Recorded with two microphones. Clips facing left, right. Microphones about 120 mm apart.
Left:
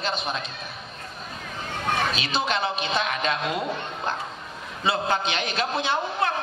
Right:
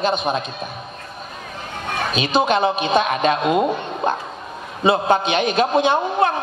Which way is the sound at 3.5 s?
55° right (ahead or behind).